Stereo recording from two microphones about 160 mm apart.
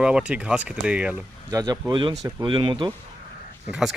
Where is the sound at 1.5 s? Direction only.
25° right (ahead or behind).